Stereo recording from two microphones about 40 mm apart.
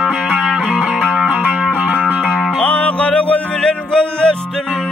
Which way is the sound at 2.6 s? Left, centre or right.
Left.